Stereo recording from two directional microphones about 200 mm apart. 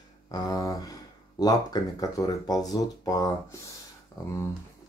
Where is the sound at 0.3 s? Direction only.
20° left (ahead or behind).